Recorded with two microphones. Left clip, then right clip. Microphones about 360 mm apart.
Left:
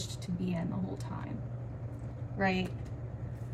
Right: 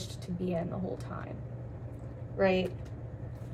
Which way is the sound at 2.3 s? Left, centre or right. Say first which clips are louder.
Right 5 dB; centre.